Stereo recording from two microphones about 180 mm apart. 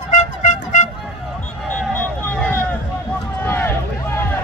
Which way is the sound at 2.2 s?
10° left (ahead or behind).